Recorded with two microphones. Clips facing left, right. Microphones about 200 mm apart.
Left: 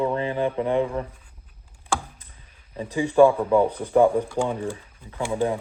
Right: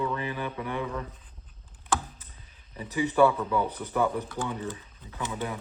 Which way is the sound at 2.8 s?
10° left (ahead or behind).